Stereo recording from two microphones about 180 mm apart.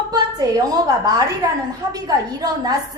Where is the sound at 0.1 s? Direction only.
20° right (ahead or behind).